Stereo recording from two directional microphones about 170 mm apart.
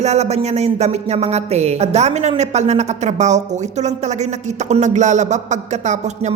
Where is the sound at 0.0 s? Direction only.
40° right (ahead or behind).